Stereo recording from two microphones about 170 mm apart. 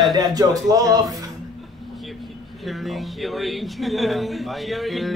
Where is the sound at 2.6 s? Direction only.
Centre (ahead or behind).